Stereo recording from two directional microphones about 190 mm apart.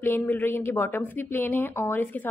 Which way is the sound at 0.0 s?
10° left (ahead or behind).